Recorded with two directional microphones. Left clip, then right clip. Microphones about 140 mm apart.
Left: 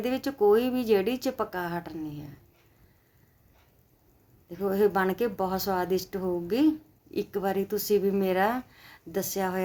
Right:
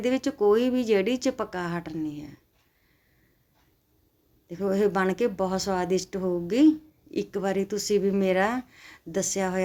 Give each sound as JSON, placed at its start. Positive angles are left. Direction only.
{"t": 0.0, "sound": "a woman's voice", "side_deg": -20}
{"t": 4.4, "sound": "a woman's voice", "side_deg": -20}